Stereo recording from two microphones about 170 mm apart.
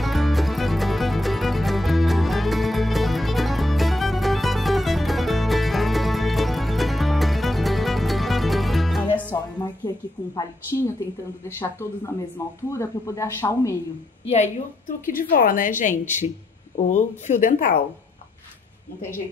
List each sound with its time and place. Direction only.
0.0 s music: centre (ahead or behind)
9.6 s a sound: 25° left (ahead or behind)
12.6 s speech: 15° left (ahead or behind)
14.2 s a woman's voice: 40° left (ahead or behind)